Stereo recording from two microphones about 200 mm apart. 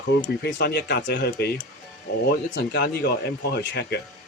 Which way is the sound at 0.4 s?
55° left (ahead or behind).